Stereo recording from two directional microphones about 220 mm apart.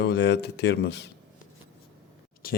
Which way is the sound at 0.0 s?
50° left (ahead or behind).